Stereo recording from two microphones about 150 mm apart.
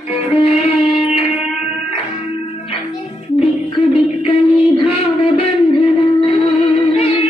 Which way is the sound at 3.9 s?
40° left (ahead or behind).